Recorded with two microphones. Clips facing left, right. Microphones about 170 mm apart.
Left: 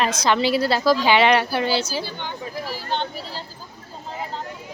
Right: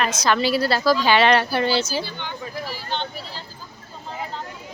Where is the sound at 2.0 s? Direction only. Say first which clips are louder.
Left 1 dB; 45° left (ahead or behind).